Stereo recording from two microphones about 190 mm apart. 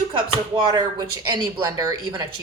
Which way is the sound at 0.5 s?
25° right (ahead or behind).